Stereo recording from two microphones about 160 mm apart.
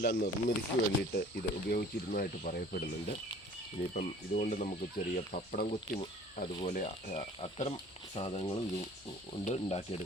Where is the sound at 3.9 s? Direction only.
55° left (ahead or behind).